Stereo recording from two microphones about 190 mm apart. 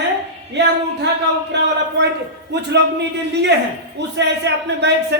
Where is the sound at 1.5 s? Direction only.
65° right (ahead or behind).